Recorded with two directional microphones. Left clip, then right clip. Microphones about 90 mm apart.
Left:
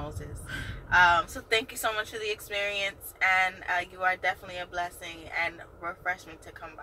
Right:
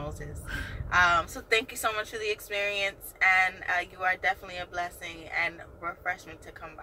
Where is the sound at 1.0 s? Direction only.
20° left (ahead or behind).